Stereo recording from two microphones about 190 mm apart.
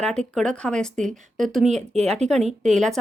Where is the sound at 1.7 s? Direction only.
35° right (ahead or behind).